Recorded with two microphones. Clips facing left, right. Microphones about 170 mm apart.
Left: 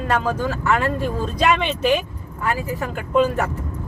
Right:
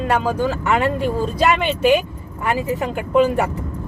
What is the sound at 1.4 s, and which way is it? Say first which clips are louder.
Speech: right 1 dB; 5° right (ahead or behind).